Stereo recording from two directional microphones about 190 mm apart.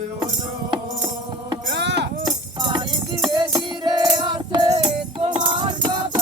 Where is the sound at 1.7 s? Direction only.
65° right (ahead or behind).